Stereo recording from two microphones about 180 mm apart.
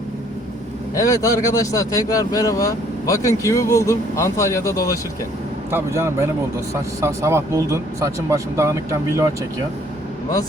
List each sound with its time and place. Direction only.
0.9 s speech: 20° left (ahead or behind)
5.7 s speech: 15° right (ahead or behind)